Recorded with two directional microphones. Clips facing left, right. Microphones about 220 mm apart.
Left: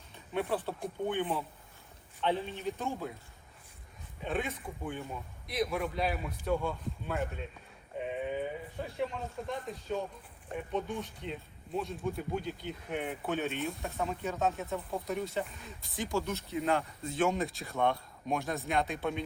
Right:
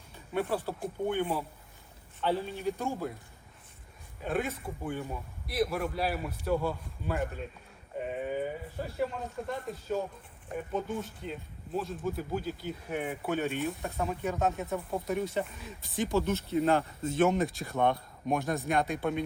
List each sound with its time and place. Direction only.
0.3 s speech: 5° right (ahead or behind)
4.2 s speech: 5° right (ahead or behind)
13.6 s speech: centre (ahead or behind)
16.6 s speech: 30° right (ahead or behind)
17.0 s speech: centre (ahead or behind)